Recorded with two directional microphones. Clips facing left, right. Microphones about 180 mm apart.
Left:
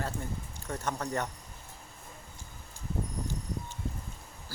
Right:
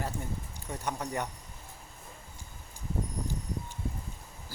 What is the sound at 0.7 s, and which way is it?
Speech, 15° right (ahead or behind).